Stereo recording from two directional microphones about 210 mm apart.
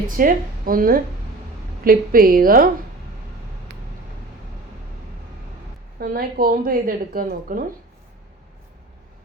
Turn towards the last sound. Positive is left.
turn(degrees=-45)  # may be behind; listen again after turning